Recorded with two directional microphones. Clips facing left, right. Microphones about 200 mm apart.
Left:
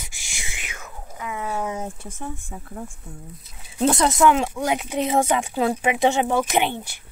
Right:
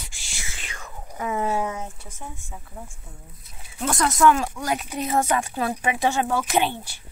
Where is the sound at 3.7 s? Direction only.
20° left (ahead or behind).